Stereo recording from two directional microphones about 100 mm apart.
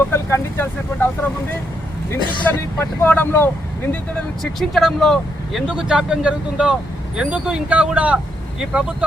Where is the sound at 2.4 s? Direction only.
20° left (ahead or behind).